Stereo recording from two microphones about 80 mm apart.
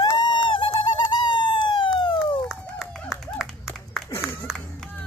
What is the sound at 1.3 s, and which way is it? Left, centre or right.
Police car, left.